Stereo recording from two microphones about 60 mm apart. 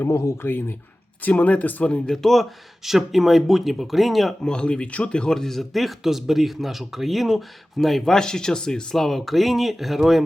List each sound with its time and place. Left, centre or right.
0.0 s speech: left
0.4 s speech: left
1.2 s speech: left
2.0 s speech: centre
4.4 s speech: centre